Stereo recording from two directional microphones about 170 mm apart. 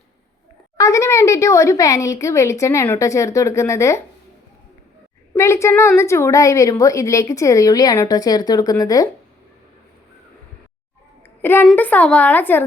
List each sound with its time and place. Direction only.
0.8 s speech: 20° left (ahead or behind)
5.3 s a woman's voice: 15° left (ahead or behind)
11.4 s speech: 10° left (ahead or behind)